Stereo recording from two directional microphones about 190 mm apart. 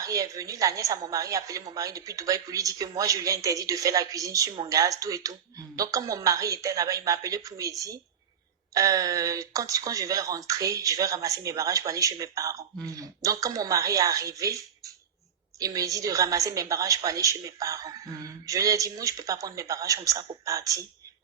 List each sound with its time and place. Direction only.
0.0 s a woman's voice: 20° right (ahead or behind)